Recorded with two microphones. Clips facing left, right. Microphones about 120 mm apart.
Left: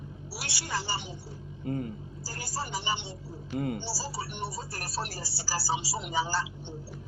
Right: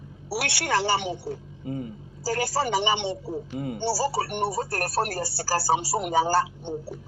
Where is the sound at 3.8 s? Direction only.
60° right (ahead or behind).